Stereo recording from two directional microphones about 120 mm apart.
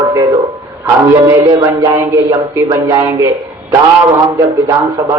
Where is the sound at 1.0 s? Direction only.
30° right (ahead or behind).